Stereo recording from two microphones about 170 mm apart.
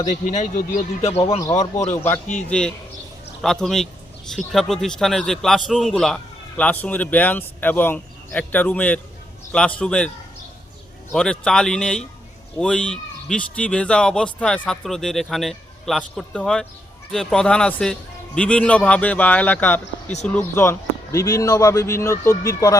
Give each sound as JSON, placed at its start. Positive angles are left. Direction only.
{"t": 0.0, "sound": "speech", "side_deg": 45}
{"t": 2.2, "sound": "speech", "side_deg": 45}
{"t": 2.5, "sound": "a man's voice", "side_deg": 5}
{"t": 11.1, "sound": "a man's voice", "side_deg": 5}